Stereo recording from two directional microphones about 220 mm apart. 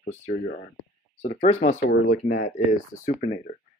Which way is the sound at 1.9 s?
45° left (ahead or behind).